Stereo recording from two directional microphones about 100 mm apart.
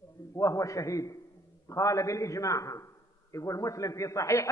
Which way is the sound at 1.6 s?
30° left (ahead or behind).